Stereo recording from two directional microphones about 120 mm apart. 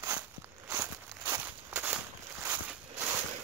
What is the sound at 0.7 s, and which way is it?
Walk, 20° right (ahead or behind).